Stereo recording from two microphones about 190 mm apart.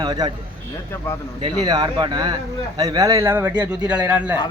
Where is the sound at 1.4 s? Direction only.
20° right (ahead or behind); by 4.4 s 5° right (ahead or behind).